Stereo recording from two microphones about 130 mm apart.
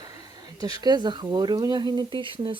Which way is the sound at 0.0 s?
30° right (ahead or behind).